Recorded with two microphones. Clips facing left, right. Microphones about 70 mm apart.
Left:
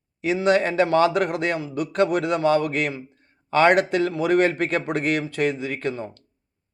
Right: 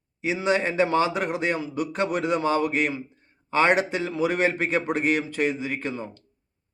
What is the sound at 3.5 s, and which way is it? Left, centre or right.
A man's voice, left.